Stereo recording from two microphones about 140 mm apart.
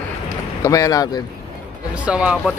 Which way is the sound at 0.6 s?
25° left (ahead or behind).